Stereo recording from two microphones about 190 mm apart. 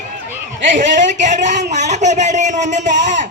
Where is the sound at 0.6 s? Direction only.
45° right (ahead or behind).